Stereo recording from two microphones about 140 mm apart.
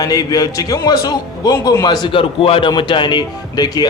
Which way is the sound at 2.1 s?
40° left (ahead or behind).